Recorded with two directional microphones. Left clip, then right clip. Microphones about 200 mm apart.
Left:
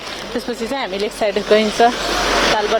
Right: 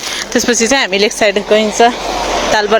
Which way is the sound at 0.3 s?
35° right (ahead or behind).